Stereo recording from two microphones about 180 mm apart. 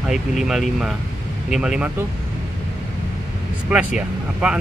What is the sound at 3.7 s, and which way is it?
Speech, 5° right (ahead or behind).